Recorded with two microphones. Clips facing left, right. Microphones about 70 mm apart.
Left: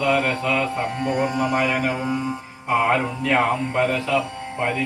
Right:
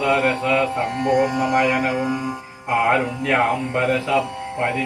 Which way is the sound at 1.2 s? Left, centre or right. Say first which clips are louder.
Right 3 dB; centre.